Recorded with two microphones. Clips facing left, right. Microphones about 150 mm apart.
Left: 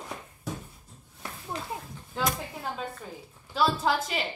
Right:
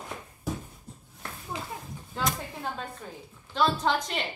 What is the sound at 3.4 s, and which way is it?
Speech, 5° left (ahead or behind).